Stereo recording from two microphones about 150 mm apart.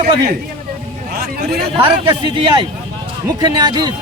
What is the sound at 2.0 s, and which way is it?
Speech, 35° right (ahead or behind).